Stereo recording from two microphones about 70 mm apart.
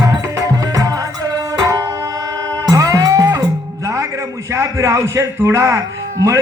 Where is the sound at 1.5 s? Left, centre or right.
Right.